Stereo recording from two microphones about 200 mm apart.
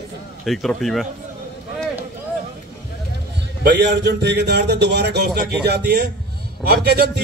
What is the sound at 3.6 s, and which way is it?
A man's voice, 60° right (ahead or behind).